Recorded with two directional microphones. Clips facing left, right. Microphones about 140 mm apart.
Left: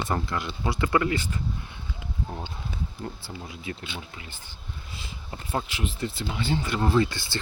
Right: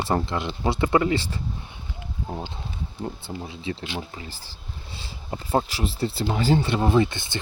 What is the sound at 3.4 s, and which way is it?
Speech, 25° right (ahead or behind).